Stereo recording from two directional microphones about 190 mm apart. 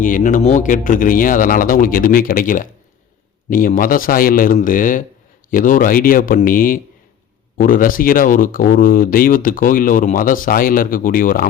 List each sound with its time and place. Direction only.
0.0 s speech: 45° left (ahead or behind)